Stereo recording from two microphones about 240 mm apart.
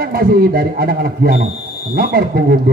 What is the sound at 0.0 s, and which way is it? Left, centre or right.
A man's voice, right.